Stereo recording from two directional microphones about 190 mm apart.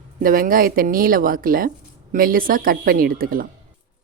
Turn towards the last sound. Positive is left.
turn(degrees=-50)  # may be behind; listen again after turning